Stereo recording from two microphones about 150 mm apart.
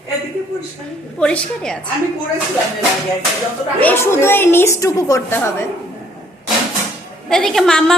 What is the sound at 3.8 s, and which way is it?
A woman's voice, 15° left (ahead or behind).